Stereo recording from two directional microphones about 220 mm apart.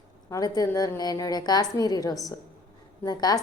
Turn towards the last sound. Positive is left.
turn(degrees=20)  # may be behind; listen again after turning